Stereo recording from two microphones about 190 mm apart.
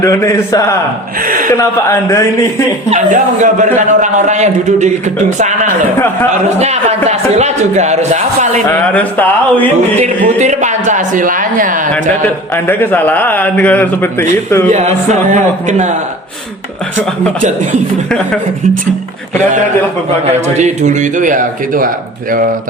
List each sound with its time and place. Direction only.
0.0 s a man's voice: 15° left (ahead or behind)
1.2 s speech: 45° right (ahead or behind)
1.5 s a man's voice: 15° left (ahead or behind)
2.9 s a man's voice: 40° right (ahead or behind)
6.6 s a man's voice: 35° right (ahead or behind)
8.7 s a man's voice: 10° left (ahead or behind)
10.0 s speech: 35° right (ahead or behind)
12.5 s a man's voice: 10° left (ahead or behind)
14.7 s a man's voice: 35° right (ahead or behind)
20.6 s a man's voice: 40° right (ahead or behind)